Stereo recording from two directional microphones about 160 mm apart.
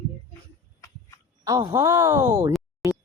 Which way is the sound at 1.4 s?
20° right (ahead or behind).